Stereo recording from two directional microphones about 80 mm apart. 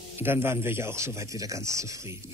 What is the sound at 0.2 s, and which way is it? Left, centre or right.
Speech, right.